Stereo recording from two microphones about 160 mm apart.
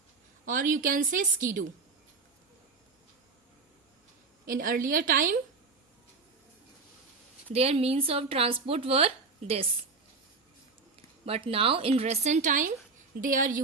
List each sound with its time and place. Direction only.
0.4 s a woman's voice: 55° right (ahead or behind)
4.4 s a woman's voice: 60° right (ahead or behind)
7.5 s speech: 40° right (ahead or behind)
10.9 s a woman's voice: 35° right (ahead or behind); by 13.6 s 55° right (ahead or behind)